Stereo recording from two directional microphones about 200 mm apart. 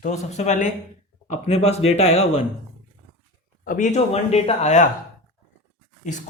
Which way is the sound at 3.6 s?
40° left (ahead or behind).